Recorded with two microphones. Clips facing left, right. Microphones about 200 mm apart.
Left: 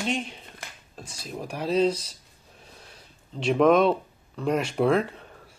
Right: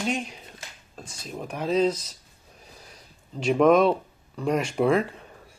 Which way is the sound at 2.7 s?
Centre (ahead or behind).